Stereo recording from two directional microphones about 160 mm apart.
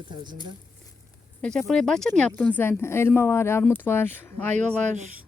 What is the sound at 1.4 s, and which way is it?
Speech, 5° left (ahead or behind).